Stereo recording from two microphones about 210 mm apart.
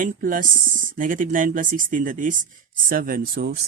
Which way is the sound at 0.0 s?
40° right (ahead or behind).